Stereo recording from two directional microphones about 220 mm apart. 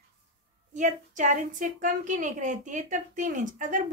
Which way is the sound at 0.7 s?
35° right (ahead or behind).